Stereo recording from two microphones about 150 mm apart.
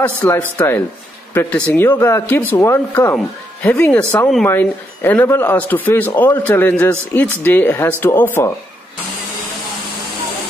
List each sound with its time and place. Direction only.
0.0 s speech: 10° left (ahead or behind)